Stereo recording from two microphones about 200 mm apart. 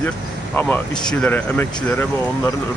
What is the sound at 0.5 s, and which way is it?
Speech, 10° left (ahead or behind).